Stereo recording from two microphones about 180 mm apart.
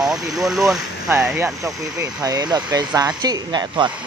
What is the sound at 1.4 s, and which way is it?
Speech, 20° right (ahead or behind).